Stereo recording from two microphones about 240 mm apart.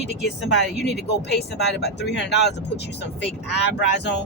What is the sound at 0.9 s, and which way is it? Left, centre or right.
A woman's voice, left.